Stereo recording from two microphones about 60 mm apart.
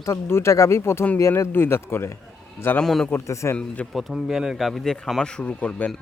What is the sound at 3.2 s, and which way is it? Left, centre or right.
Speech, left.